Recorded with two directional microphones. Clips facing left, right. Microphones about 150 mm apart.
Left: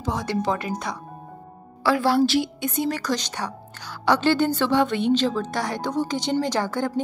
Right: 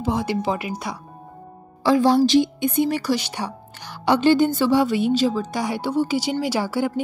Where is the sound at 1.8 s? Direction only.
20° right (ahead or behind).